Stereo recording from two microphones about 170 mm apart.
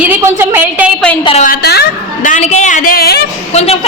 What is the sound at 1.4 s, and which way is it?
Speech, 65° left (ahead or behind).